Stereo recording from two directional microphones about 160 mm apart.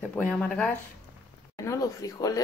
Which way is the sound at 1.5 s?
20° left (ahead or behind).